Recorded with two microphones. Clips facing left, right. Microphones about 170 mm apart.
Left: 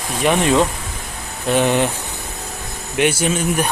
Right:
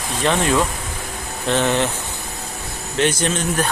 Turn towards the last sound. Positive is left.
turn(degrees=10)  # may be behind; listen again after turning